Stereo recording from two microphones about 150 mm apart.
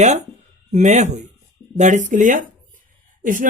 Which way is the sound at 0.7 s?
55° right (ahead or behind).